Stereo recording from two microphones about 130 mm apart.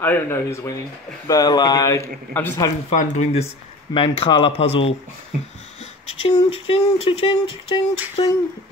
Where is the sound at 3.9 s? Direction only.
40° left (ahead or behind).